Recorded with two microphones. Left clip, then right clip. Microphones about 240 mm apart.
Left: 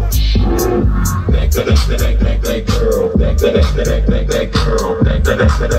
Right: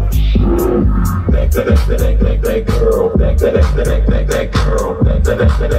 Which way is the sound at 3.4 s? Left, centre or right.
Centre.